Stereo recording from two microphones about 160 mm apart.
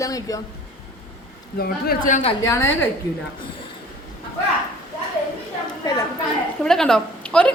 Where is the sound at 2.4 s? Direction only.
20° left (ahead or behind).